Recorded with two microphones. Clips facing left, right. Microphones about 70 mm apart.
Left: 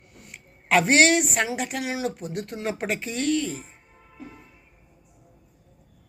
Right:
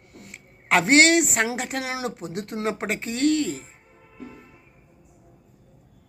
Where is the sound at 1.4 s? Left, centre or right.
Right.